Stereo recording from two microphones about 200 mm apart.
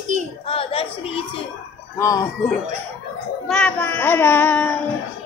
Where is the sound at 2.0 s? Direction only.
15° left (ahead or behind).